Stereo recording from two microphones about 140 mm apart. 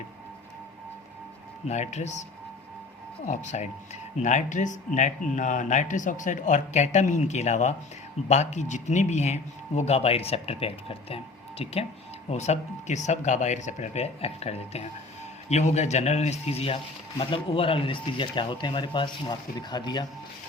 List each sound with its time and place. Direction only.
1.6 s a man's voice: 55° left (ahead or behind)
3.2 s a man's voice: 55° left (ahead or behind); by 20.1 s 30° left (ahead or behind)